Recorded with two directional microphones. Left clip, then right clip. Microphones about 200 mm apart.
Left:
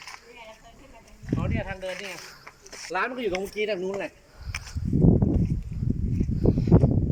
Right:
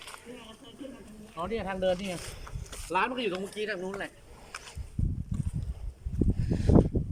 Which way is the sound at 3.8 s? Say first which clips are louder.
Left 6 dB; 20° left (ahead or behind).